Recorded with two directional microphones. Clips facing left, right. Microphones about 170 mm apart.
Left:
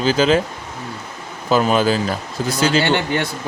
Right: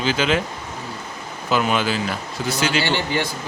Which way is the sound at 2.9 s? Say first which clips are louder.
Left 3 dB; 55° left (ahead or behind).